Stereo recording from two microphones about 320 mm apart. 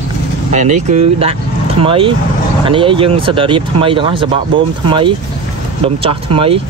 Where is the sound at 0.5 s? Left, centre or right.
Right.